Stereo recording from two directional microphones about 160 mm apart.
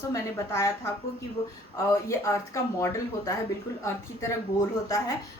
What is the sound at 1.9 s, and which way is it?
Speech, 20° left (ahead or behind).